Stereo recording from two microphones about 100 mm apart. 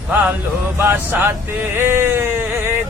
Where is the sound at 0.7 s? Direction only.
20° right (ahead or behind).